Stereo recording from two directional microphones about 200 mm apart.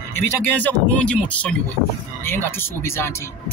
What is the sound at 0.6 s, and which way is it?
Speech, 5° left (ahead or behind).